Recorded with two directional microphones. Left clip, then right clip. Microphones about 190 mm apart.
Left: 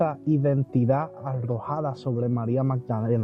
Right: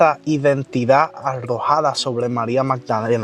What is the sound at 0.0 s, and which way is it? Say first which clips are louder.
Speech: right 10 dB; 10° right (ahead or behind).